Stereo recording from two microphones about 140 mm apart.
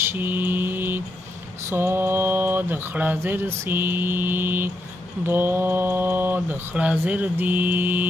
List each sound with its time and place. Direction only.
0.0 s mantra: 15° right (ahead or behind)
1.7 s speech: 15° right (ahead or behind)